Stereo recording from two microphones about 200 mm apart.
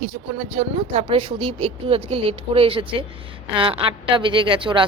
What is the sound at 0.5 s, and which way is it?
Speech, 30° right (ahead or behind).